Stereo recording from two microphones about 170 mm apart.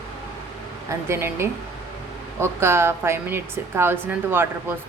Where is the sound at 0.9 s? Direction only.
15° right (ahead or behind).